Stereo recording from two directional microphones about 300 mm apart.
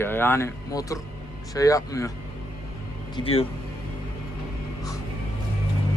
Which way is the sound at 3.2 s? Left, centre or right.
Centre.